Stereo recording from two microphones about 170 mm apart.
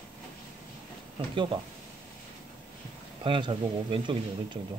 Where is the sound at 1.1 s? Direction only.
30° right (ahead or behind).